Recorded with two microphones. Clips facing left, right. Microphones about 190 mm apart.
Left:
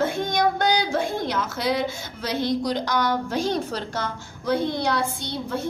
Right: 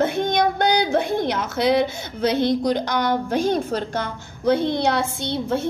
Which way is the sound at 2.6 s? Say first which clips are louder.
Right 3 dB; 55° right (ahead or behind).